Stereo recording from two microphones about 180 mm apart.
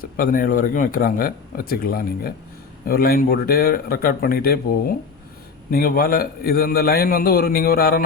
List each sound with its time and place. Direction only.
0.0 s a man's voice: 50° left (ahead or behind)